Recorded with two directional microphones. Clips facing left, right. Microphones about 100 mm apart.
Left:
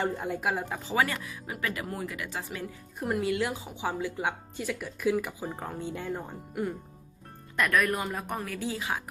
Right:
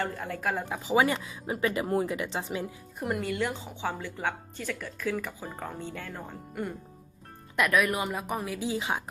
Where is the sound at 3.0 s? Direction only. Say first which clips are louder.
Left 1 dB; centre (ahead or behind).